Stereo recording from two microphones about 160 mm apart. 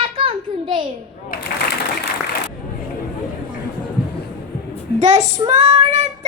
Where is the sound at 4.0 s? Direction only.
75° left (ahead or behind).